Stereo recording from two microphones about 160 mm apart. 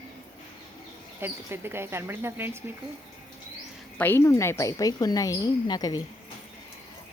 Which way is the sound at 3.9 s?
10° left (ahead or behind).